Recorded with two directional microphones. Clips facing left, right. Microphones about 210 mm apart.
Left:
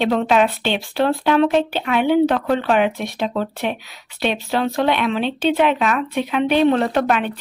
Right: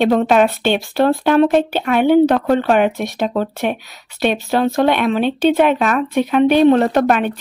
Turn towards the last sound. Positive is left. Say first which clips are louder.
# right 4 dB
turn(degrees=-45)  # may be behind; listen again after turning